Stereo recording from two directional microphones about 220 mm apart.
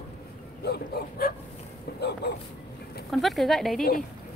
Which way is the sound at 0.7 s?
45° left (ahead or behind).